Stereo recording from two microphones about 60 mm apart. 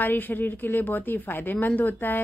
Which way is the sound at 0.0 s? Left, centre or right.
Left.